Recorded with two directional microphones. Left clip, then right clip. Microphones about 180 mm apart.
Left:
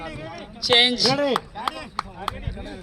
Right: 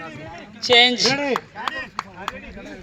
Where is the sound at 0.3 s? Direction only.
35° left (ahead or behind).